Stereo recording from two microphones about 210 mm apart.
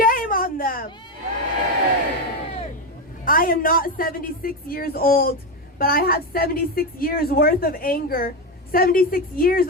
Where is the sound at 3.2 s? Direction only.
40° left (ahead or behind).